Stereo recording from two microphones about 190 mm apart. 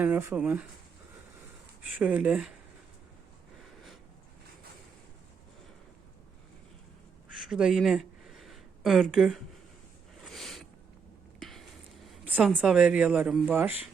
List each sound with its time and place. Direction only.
0.0 s speech: 10° right (ahead or behind)
1.8 s speech: 5° right (ahead or behind)
7.4 s a sound: 5° right (ahead or behind)
12.0 s speech: 5° right (ahead or behind)